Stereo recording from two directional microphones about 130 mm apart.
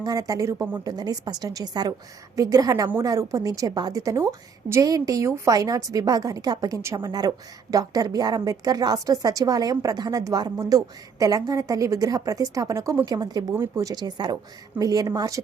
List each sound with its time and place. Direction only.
0.0 s a woman's voice: 30° right (ahead or behind)